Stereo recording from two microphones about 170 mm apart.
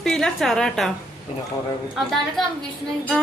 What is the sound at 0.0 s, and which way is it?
Speech, 5° left (ahead or behind).